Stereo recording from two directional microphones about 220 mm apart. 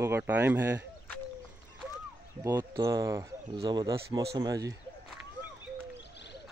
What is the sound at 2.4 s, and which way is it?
Speech, 10° right (ahead or behind).